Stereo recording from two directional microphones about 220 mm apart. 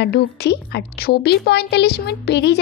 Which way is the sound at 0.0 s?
50° left (ahead or behind).